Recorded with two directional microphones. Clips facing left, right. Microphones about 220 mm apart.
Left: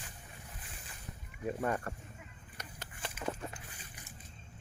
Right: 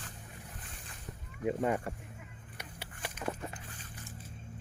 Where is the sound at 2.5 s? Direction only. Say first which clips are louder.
Right 1 dB; 10° right (ahead or behind).